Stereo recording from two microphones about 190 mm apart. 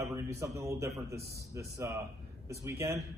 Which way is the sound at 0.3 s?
15° right (ahead or behind).